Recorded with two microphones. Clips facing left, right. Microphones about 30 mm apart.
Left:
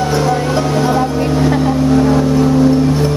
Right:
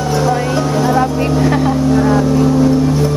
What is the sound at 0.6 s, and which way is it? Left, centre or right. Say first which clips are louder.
Music: even; centre.